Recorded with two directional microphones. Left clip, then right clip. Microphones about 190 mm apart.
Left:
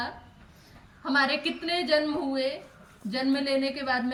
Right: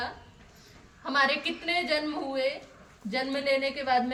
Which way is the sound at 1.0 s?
15° right (ahead or behind).